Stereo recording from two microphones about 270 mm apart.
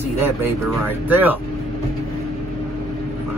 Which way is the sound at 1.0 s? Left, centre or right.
Centre.